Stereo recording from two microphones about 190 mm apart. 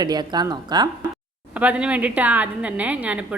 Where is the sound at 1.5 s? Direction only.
5° right (ahead or behind).